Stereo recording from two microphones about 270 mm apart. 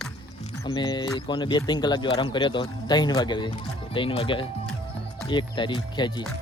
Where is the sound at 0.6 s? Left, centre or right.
Centre.